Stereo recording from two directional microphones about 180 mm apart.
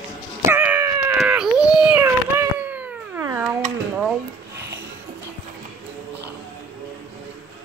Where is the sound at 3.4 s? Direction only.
5° right (ahead or behind).